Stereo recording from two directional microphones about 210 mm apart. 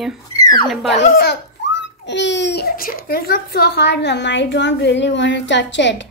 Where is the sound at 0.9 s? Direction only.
45° left (ahead or behind).